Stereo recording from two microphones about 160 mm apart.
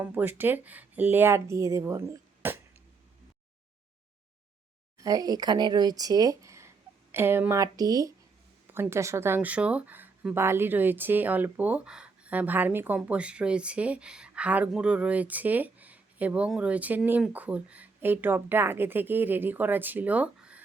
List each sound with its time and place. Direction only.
0.0 s speech: 10° right (ahead or behind)
4.9 s speech: 20° right (ahead or behind)